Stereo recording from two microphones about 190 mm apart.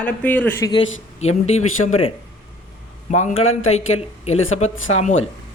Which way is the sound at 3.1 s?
35° left (ahead or behind).